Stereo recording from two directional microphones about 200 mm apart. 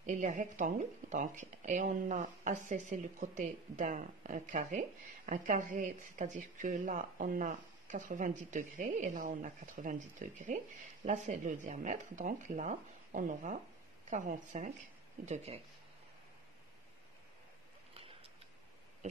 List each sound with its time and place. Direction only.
0.0 s speech: 40° right (ahead or behind)